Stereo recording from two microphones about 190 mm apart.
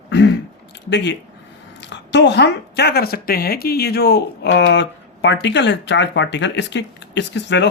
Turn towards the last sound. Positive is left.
turn(degrees=65)  # may be behind; listen again after turning